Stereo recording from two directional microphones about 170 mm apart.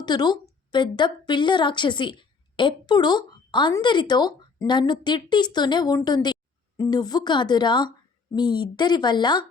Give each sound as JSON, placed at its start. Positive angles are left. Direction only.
{"t": 0.0, "sound": "a woman's voice", "side_deg": 25}